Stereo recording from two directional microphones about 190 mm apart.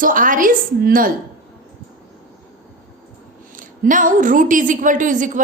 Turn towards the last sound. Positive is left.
turn(degrees=-45)  # may be behind; listen again after turning